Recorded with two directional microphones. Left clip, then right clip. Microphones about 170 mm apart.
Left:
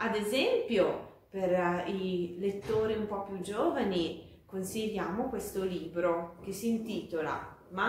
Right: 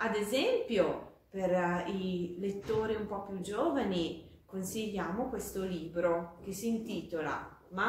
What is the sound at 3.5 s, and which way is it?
A woman's voice, 15° right (ahead or behind).